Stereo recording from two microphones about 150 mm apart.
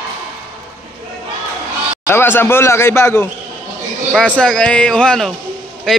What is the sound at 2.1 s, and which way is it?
A man's voice, 15° left (ahead or behind).